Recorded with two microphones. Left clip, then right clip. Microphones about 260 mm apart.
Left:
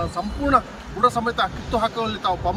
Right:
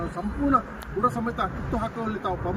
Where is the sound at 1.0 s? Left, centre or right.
Centre.